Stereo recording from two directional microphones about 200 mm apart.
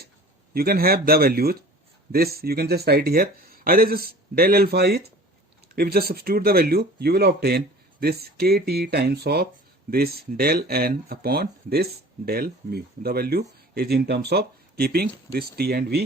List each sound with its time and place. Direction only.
0.5 s speech: 50° right (ahead or behind)